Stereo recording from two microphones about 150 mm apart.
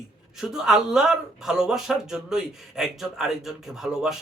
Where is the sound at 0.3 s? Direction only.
5° right (ahead or behind).